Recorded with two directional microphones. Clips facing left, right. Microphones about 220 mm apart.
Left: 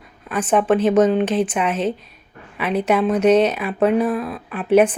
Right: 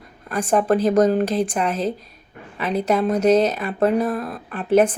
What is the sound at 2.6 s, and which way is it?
A woman's voice, 5° left (ahead or behind).